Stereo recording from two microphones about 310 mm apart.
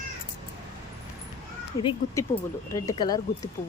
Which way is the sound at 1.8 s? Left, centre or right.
Centre.